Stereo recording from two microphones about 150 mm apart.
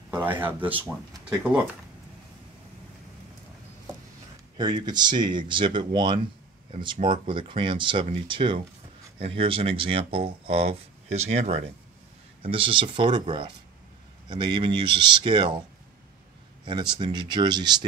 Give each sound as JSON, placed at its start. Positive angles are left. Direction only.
{"t": 0.2, "sound": "speech", "side_deg": -10}
{"t": 4.6, "sound": "speech", "side_deg": -30}
{"t": 14.3, "sound": "speech", "side_deg": -30}
{"t": 16.6, "sound": "speech", "side_deg": -30}